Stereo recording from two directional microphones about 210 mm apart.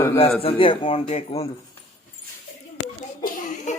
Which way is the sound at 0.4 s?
25° left (ahead or behind).